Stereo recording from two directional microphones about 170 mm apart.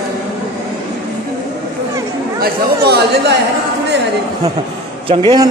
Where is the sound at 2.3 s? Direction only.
70° right (ahead or behind).